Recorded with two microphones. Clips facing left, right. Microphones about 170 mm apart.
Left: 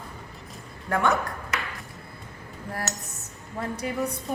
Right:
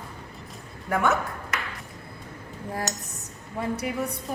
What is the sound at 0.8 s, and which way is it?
Speech, centre (ahead or behind).